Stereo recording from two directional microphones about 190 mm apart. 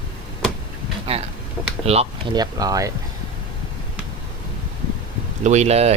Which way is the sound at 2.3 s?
20° right (ahead or behind).